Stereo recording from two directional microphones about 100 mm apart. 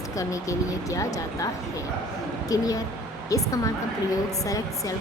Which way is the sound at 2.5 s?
35° left (ahead or behind).